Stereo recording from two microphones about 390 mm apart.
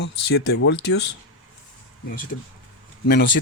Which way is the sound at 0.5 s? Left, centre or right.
Left.